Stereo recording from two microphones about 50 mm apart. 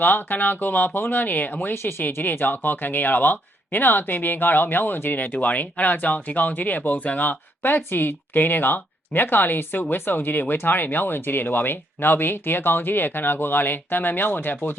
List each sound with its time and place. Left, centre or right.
0.0 s speech: left
1.7 s speech: left
2.0 s speech: left